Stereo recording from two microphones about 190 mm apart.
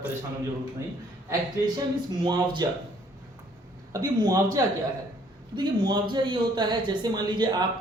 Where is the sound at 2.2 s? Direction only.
25° right (ahead or behind).